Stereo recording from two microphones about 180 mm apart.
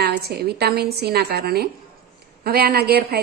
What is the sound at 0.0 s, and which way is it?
A woman's voice, 60° right (ahead or behind).